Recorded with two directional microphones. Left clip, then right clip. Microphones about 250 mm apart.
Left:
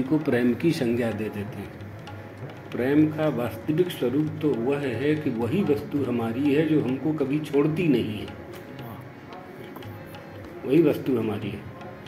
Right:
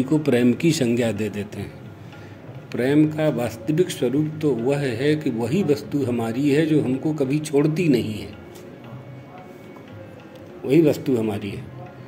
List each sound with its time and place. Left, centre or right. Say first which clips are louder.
0.1 s speech: right 4 dB; right
2.7 s speech: right 3 dB; right
10.7 s speech: right 3 dB; right